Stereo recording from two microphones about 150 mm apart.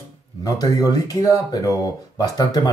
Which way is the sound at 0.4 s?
25° left (ahead or behind).